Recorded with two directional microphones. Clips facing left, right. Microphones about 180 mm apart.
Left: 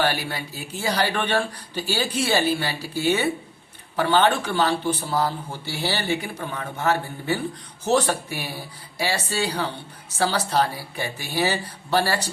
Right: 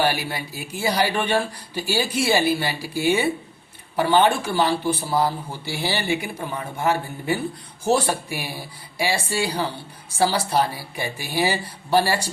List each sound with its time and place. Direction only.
0.0 s speech: 10° right (ahead or behind)